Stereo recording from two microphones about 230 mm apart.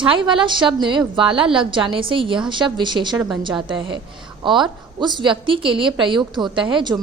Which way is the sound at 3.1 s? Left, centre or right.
Centre.